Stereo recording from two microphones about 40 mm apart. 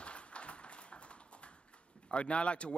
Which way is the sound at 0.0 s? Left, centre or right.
Left.